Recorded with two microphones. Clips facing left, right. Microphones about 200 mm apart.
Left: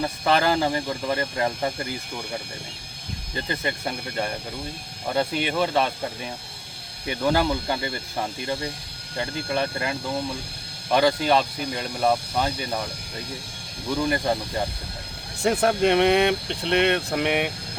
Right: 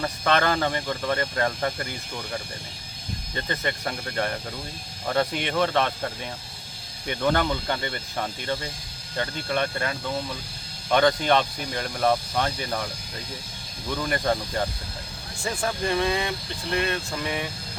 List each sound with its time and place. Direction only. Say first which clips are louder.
0.0 s speech: left 2 dB; 10° left (ahead or behind)
3.5 s speech: left 1 dB; 10° left (ahead or behind)
7.2 s speech: left 2 dB; 5° left (ahead or behind)
14.3 s speech: even; 10° left (ahead or behind)
15.4 s speech: left 7 dB; 65° left (ahead or behind)